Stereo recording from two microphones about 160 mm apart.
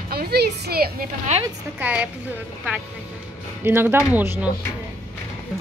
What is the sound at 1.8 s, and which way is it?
Speech, 10° right (ahead or behind).